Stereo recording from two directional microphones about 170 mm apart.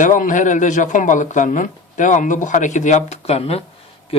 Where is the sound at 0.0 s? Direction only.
50° left (ahead or behind).